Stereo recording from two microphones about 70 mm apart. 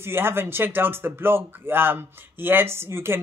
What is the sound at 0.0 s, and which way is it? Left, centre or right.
Speech, right.